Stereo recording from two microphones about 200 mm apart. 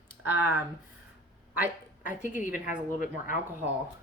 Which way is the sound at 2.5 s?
40° left (ahead or behind).